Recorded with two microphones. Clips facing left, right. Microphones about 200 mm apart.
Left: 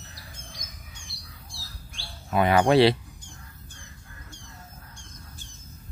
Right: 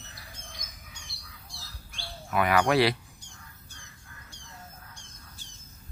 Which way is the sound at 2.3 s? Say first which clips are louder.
Left 4 dB; 25° left (ahead or behind).